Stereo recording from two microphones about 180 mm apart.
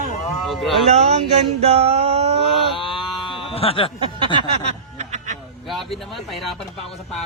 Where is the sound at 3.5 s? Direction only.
30° left (ahead or behind).